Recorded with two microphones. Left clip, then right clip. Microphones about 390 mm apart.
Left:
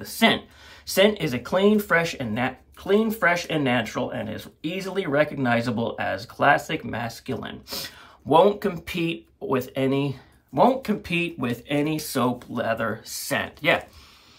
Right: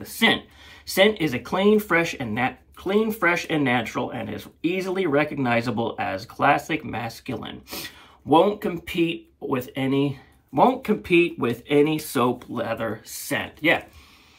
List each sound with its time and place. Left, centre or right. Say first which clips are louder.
0.8 s speech: right 1 dB; left
1.1 s speech: even; centre
7.1 s speech: even; left
8.3 s speech: left 1 dB; centre